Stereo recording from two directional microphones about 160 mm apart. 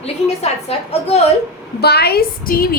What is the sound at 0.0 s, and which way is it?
A woman's voice, 40° left (ahead or behind).